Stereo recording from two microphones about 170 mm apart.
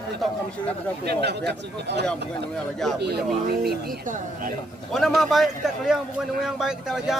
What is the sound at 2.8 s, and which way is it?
Speech, centre (ahead or behind).